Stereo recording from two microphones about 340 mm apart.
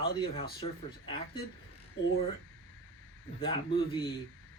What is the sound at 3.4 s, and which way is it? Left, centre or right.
Speech, centre.